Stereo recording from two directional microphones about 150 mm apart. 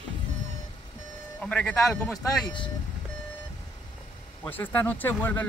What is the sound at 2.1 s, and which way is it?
Speech, 30° left (ahead or behind).